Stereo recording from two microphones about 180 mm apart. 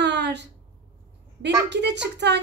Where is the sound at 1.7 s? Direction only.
70° right (ahead or behind).